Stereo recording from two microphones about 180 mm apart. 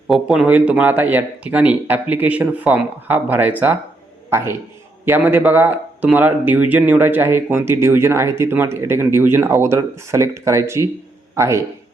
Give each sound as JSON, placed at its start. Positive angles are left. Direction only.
{"t": 0.1, "sound": "a man's voice", "side_deg": -5}